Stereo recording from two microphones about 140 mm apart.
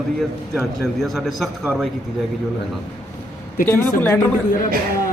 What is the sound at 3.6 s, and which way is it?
Speech, 15° left (ahead or behind).